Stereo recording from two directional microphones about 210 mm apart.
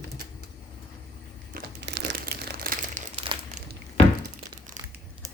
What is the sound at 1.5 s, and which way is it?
Crumpling, 50° right (ahead or behind).